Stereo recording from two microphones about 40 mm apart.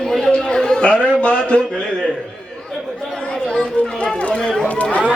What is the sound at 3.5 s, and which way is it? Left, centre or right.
Speech, left.